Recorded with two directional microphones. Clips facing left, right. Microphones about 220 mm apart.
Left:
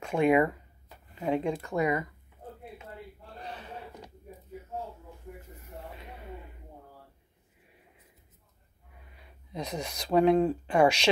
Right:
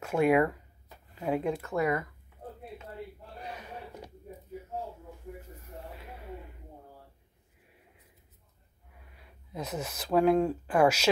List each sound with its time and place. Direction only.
0.0 s speech: 5° right (ahead or behind)
1.8 s speech: 15° left (ahead or behind)
3.3 s a sound: 10° right (ahead or behind)
9.5 s speech: 5° right (ahead or behind)